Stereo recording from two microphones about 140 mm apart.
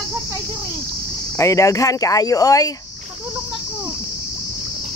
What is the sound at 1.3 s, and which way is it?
Speech, 20° left (ahead or behind).